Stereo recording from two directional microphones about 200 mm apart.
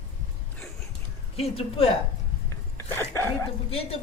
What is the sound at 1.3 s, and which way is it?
Speech, 30° left (ahead or behind).